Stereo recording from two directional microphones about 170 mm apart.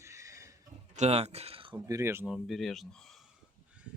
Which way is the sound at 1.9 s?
15° right (ahead or behind).